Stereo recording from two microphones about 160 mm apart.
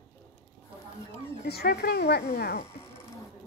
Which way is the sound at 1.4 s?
80° left.